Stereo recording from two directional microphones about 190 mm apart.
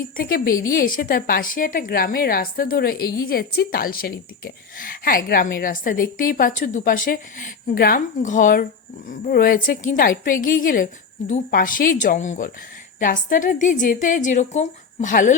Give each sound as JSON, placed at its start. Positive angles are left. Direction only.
{"t": 0.0, "sound": "a woman's voice", "side_deg": 50}